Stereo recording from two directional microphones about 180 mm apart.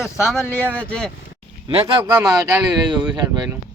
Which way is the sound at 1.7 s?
30° right (ahead or behind).